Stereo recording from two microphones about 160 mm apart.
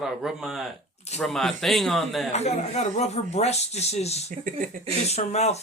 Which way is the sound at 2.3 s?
45° left (ahead or behind).